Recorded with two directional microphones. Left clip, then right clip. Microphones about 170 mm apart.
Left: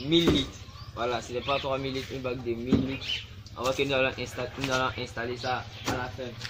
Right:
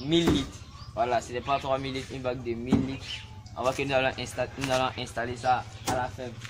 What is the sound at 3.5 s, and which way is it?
Speech, 25° right (ahead or behind).